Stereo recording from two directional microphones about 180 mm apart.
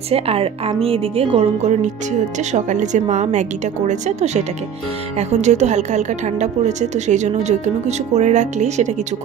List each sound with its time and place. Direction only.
0.1 s a woman's voice: 35° right (ahead or behind)